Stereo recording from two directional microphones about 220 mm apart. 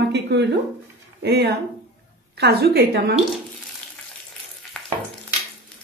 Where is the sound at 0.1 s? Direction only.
50° right (ahead or behind).